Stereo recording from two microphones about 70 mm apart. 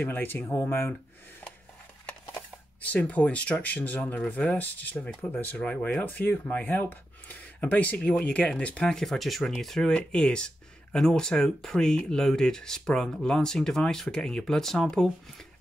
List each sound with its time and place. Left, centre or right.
0.0 s speech: left
2.0 s speech: left